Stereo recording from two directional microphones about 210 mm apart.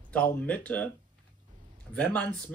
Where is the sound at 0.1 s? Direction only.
5° left (ahead or behind).